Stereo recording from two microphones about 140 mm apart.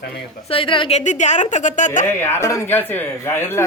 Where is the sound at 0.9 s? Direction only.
60° left (ahead or behind).